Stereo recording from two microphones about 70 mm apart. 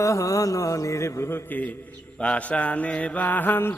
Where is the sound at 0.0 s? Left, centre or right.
Left.